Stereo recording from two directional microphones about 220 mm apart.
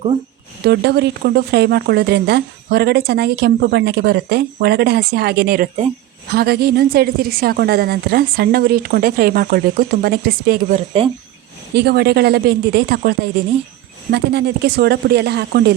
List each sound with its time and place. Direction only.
0.6 s speech: 50° right (ahead or behind)
11.0 s speech: 25° right (ahead or behind)
11.7 s speech: 45° right (ahead or behind)